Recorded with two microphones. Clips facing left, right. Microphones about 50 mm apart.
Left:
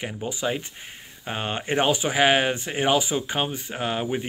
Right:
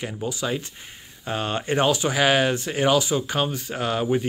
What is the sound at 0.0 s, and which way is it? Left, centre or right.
Speech, left.